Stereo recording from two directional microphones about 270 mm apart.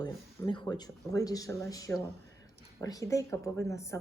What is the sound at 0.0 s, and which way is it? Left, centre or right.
A woman's voice, centre.